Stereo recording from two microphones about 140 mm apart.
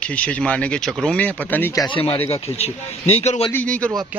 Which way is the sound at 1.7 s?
35° left (ahead or behind).